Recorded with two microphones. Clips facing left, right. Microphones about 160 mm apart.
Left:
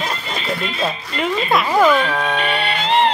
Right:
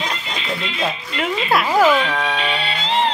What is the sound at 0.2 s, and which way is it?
Speech, 45° left (ahead or behind).